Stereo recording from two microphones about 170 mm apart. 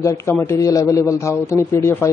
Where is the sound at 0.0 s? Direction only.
15° left (ahead or behind).